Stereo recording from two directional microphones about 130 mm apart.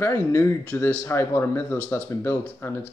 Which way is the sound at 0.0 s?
15° left (ahead or behind).